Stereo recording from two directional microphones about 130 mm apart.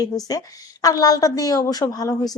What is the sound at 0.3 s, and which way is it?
A woman's voice, 30° left (ahead or behind).